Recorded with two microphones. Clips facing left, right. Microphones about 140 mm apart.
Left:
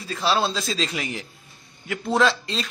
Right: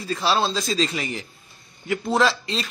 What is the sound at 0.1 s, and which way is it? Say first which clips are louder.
A man's voice: right 1 dB; centre (ahead or behind).